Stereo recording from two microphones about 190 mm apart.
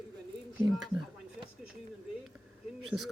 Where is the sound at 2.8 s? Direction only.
Centre (ahead or behind).